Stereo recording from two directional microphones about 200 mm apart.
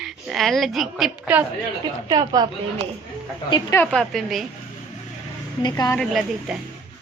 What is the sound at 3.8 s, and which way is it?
Speech, 5° left (ahead or behind).